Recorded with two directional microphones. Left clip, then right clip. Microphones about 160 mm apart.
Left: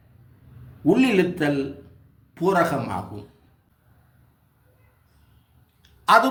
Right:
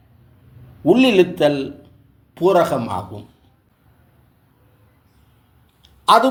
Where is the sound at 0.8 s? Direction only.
40° right (ahead or behind).